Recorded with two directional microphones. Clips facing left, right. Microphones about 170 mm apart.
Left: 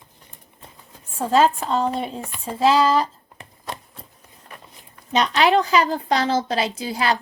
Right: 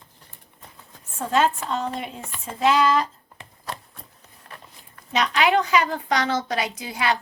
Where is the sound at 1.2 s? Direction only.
35° left (ahead or behind).